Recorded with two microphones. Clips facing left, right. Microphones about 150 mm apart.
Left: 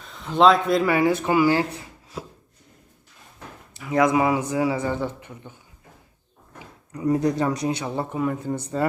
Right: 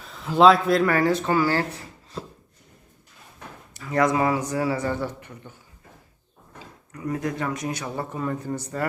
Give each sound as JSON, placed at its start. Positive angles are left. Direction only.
{"t": 0.0, "sound": "speech", "side_deg": 0}
{"t": 3.8, "sound": "a man's voice", "side_deg": 10}
{"t": 7.0, "sound": "speech", "side_deg": 30}
{"t": 8.2, "sound": "a man's voice", "side_deg": 10}
{"t": 8.6, "sound": "speech", "side_deg": 20}